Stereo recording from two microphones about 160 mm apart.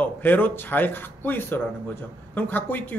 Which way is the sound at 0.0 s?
10° left (ahead or behind).